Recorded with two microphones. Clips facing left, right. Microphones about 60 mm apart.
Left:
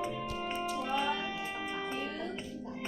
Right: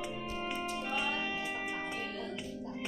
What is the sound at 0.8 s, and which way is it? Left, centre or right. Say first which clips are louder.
Music: left 3 dB; left.